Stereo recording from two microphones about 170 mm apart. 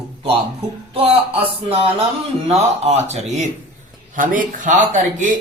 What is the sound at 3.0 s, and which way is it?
A man's voice, 40° right (ahead or behind).